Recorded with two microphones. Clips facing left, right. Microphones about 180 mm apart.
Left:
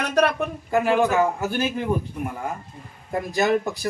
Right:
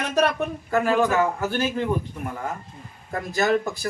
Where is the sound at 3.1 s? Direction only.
15° left (ahead or behind).